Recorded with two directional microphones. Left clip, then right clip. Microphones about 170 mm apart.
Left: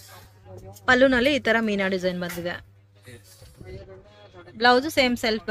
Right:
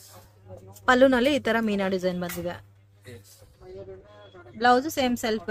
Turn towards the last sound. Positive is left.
turn(degrees=0)  # may be behind; listen again after turning